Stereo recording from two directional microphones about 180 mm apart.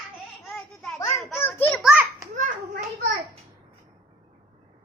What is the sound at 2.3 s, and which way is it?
Hands, 45° right (ahead or behind).